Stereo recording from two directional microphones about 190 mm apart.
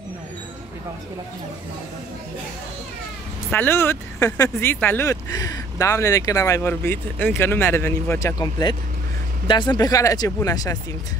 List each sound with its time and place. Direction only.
3.5 s speech: 10° left (ahead or behind)